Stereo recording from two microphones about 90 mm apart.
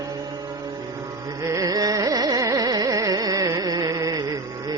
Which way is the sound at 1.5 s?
40° right (ahead or behind).